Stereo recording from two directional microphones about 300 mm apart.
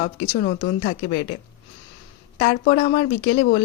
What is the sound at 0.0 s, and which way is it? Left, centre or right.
Speech, left.